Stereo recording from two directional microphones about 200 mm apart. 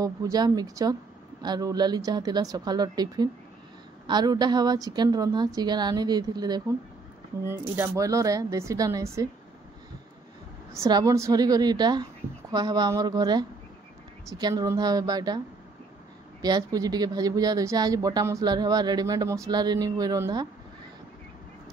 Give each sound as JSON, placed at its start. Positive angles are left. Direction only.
{"t": 0.0, "sound": "speech", "side_deg": -20}
{"t": 10.7, "sound": "speech", "side_deg": -15}